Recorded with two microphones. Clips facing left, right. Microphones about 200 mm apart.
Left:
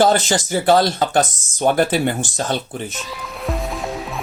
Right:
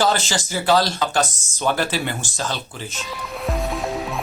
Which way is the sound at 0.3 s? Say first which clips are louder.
Left 4 dB; 55° left (ahead or behind).